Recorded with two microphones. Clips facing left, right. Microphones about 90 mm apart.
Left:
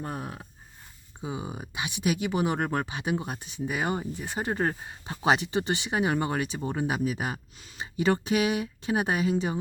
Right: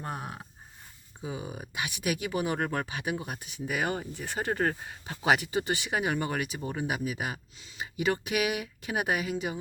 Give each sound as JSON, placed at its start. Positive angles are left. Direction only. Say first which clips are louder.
{"t": 1.2, "sound": "speech", "louder": "left 2 dB", "side_deg": 25}